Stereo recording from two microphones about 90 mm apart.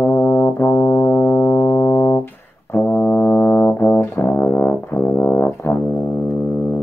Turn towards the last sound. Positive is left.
turn(degrees=20)  # may be behind; listen again after turning